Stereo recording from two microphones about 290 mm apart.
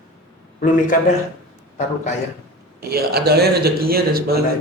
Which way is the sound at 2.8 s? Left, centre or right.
Right.